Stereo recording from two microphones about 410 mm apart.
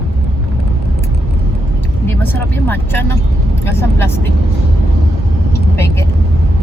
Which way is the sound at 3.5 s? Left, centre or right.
Centre.